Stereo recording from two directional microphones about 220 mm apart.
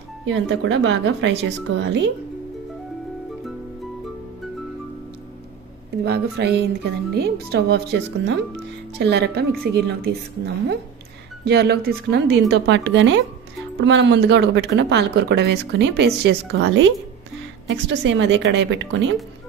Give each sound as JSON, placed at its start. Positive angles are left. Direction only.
{"t": 0.2, "sound": "speech", "side_deg": -60}
{"t": 6.0, "sound": "speech", "side_deg": -50}